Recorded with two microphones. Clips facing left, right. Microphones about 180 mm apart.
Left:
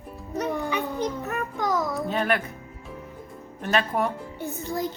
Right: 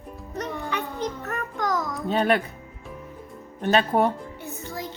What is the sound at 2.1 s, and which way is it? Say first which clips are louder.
Speech: right 6 dB; 30° right (ahead or behind).